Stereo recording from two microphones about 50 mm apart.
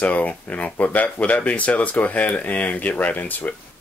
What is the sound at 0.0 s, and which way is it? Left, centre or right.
Speech, left.